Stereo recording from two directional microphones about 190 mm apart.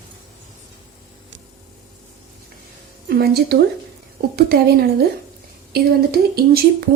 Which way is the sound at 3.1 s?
55° right (ahead or behind).